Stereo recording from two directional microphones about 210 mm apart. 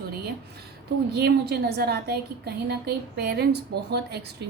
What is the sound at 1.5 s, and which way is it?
A woman's voice, 50° right (ahead or behind).